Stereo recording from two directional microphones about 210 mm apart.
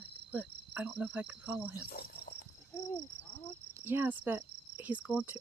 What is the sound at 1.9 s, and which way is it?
Cricket, 45° left (ahead or behind).